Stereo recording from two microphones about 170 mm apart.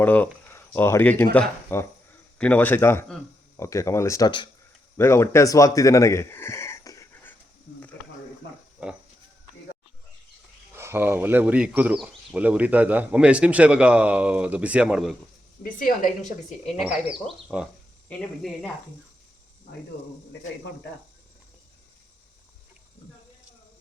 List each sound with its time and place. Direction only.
0.0 s speech: 10° left (ahead or behind)
8.8 s speech: 10° right (ahead or behind)
10.8 s speech: 15° right (ahead or behind)
15.6 s a woman's voice: 55° left (ahead or behind)
16.8 s speech: centre (ahead or behind)